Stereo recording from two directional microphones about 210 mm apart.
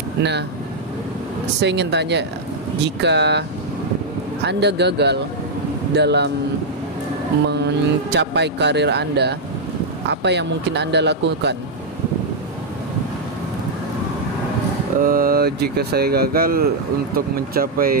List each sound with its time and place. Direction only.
1.6 s speech: 55° right (ahead or behind)
4.5 s speech: 55° right (ahead or behind)
7.5 s speech: 55° right (ahead or behind)
15.0 s speech: 45° right (ahead or behind)